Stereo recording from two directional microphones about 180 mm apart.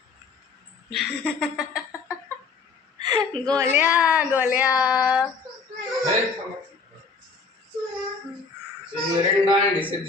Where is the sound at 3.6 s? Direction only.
10° right (ahead or behind).